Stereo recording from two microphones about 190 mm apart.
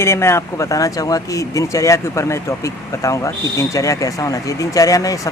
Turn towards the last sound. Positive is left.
turn(degrees=20)  # may be behind; listen again after turning